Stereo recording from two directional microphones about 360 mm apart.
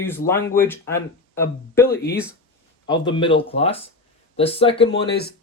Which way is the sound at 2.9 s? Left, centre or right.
Centre.